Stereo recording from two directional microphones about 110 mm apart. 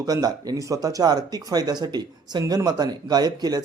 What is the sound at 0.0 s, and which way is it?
A man's voice, 35° right (ahead or behind).